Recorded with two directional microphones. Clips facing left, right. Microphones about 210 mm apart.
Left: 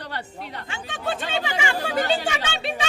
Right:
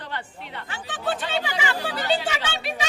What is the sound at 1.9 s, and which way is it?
Speech, 50° left (ahead or behind).